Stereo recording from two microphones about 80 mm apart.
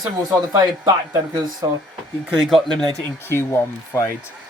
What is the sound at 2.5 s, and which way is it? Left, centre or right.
Speech, centre.